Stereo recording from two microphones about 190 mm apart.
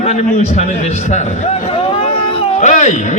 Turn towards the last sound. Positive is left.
turn(degrees=40)  # may be behind; listen again after turning